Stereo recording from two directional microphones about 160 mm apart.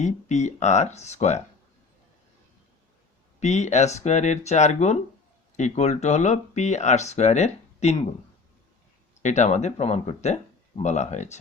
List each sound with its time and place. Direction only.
0.0 s speech: 45° left (ahead or behind)
3.4 s speech: 45° left (ahead or behind)
9.2 s speech: 45° left (ahead or behind)